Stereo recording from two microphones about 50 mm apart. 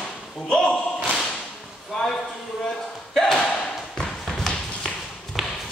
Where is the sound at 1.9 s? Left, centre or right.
Centre.